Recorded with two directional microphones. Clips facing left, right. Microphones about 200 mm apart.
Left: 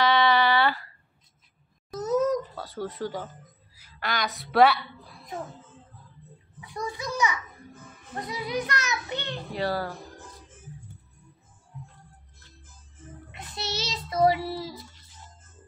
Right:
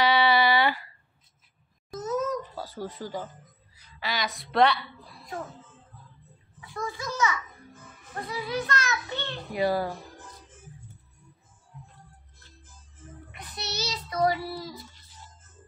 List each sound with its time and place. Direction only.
0.0 s a sound: 10° right (ahead or behind)
2.0 s a sound: 35° left (ahead or behind)
2.5 s a woman's voice: centre (ahead or behind)
6.6 s a child's voice: 15° left (ahead or behind)
9.5 s speech: 10° right (ahead or behind)
13.3 s child singing: 25° left (ahead or behind)